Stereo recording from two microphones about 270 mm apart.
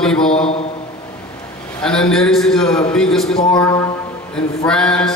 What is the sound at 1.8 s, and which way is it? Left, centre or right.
A man's voice, centre.